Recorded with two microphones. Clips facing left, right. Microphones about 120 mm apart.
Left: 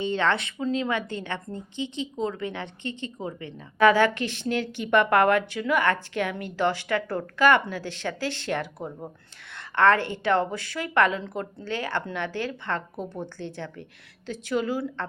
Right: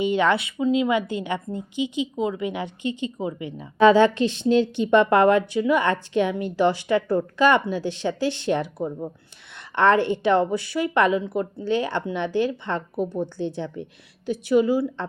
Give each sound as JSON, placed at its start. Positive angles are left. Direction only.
{"t": 0.0, "sound": "a woman's voice", "side_deg": -15}